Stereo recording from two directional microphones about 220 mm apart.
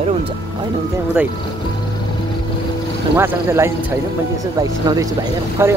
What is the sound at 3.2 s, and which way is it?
Speech, 10° right (ahead or behind).